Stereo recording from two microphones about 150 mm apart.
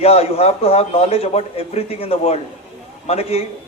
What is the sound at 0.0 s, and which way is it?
A man's voice, 45° left (ahead or behind).